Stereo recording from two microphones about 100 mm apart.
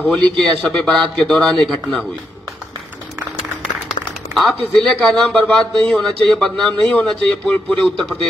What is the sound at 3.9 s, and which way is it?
Speech, 5° left (ahead or behind).